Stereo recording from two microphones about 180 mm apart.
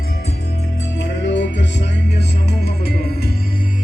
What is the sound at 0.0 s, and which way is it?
Music, 60° left (ahead or behind).